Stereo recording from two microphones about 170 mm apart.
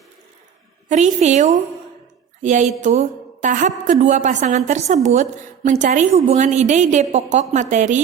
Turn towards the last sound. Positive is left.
turn(degrees=-45)  # may be behind; listen again after turning